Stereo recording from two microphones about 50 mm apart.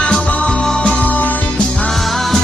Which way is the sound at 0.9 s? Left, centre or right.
Left.